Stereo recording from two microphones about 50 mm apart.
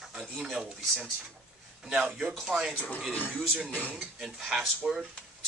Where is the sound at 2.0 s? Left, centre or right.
Centre.